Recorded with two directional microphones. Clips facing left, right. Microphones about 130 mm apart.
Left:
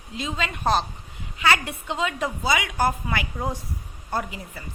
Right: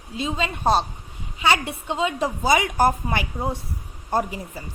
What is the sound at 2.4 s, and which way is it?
Speech, 40° right (ahead or behind).